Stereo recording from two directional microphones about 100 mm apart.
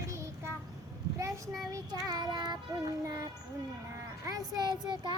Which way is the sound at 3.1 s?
40° right (ahead or behind).